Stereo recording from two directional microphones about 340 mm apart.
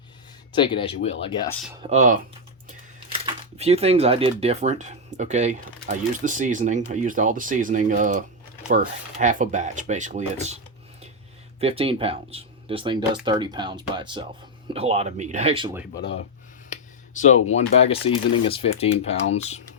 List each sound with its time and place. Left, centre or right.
0.5 s speech: centre
1.8 s speech: centre
3.2 s speech: centre
11.6 s speech: centre
17.2 s speech: left